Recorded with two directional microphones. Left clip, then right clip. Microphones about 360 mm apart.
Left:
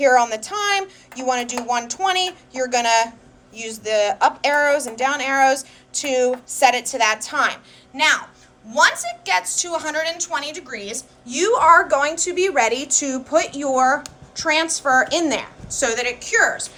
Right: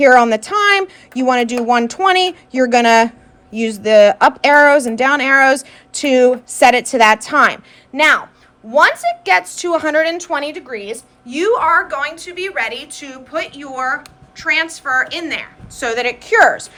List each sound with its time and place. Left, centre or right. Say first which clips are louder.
0.0 s a woman's voice: right 6 dB; right